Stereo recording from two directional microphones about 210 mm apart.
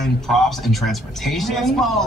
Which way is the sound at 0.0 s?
Centre (ahead or behind).